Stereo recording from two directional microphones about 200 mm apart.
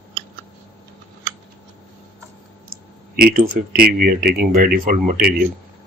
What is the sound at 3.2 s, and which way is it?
Speech, 45° right (ahead or behind).